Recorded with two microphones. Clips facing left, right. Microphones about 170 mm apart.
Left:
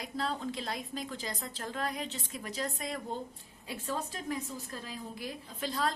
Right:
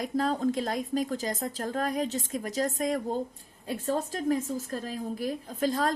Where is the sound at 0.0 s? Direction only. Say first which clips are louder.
Right 8 dB; 45° right (ahead or behind).